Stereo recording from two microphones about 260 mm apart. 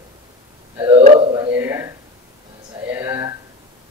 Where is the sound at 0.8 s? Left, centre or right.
Centre.